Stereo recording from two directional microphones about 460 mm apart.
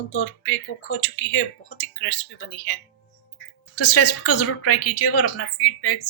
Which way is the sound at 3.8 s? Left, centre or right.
Left.